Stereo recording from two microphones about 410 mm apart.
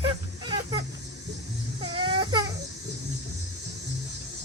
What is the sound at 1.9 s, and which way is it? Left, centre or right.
Baby cry, centre.